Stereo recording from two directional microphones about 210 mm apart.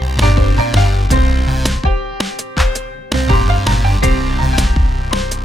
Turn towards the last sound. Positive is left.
turn(degrees=0)  # may be behind; listen again after turning